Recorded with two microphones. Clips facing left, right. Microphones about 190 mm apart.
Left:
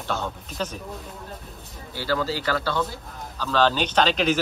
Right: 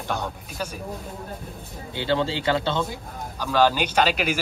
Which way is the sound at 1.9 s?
25° right (ahead or behind).